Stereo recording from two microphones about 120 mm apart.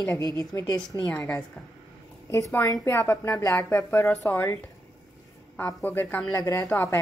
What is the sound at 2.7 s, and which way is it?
Speech, 20° left (ahead or behind).